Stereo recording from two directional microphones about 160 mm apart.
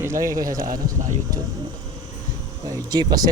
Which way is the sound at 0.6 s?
60° right (ahead or behind).